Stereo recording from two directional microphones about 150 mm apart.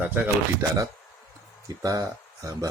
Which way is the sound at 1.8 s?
25° right (ahead or behind).